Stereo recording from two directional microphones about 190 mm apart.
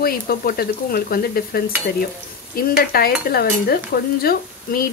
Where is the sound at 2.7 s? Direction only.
55° left (ahead or behind).